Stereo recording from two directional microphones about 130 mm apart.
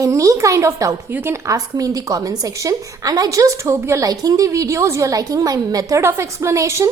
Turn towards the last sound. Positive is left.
turn(degrees=-20)  # may be behind; listen again after turning